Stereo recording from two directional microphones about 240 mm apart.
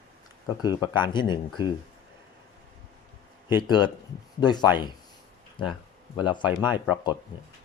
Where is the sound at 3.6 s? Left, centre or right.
Centre.